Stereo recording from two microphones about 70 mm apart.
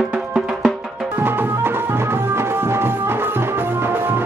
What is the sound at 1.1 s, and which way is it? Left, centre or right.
Music, right.